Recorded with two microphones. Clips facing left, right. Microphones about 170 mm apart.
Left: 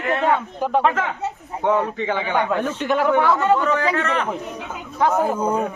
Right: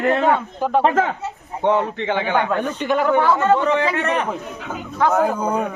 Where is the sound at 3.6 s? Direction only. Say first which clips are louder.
Right 1 dB; 25° right (ahead or behind).